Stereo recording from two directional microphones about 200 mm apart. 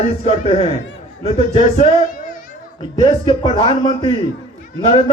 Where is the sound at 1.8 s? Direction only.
45° left (ahead or behind).